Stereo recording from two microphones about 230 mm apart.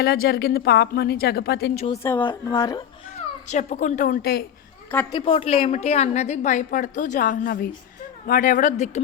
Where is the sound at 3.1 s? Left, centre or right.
Left.